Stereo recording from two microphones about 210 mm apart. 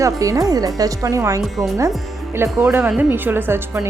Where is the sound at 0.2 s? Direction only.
15° right (ahead or behind).